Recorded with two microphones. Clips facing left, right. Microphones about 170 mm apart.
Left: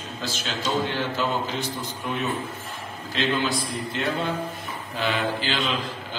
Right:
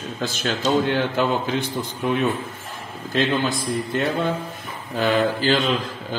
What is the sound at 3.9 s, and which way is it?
A man's voice, 50° right (ahead or behind).